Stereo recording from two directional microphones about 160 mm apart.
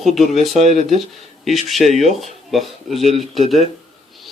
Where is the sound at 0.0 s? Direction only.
Centre (ahead or behind).